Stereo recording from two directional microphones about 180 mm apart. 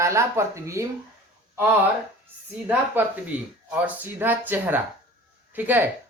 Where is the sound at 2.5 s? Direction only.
10° right (ahead or behind).